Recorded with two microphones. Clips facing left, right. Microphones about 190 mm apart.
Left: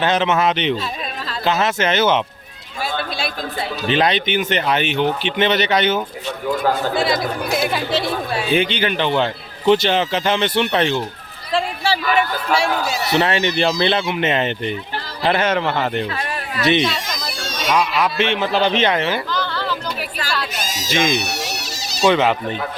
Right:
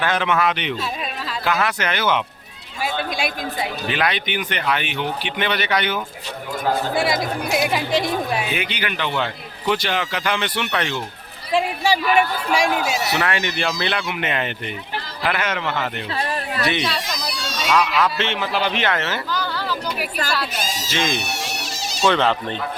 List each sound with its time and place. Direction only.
0.0 s a man's voice: 20° left (ahead or behind)
2.8 s a man's voice: 15° right (ahead or behind)
3.8 s a man's voice: 25° left (ahead or behind)
6.9 s a man's voice: 10° right (ahead or behind)
8.4 s a man's voice: 30° left (ahead or behind)
11.5 s a man's voice: 15° right (ahead or behind)
13.1 s a man's voice: 25° left (ahead or behind)
16.1 s a sound: 35° right (ahead or behind)
17.1 s a sound: 50° left (ahead or behind)
17.7 s a man's voice: 10° left (ahead or behind)
19.3 s a sound: 10° right (ahead or behind)
20.9 s a man's voice: 15° left (ahead or behind)
21.2 s music: 40° left (ahead or behind)
22.0 s a man's voice: 10° left (ahead or behind)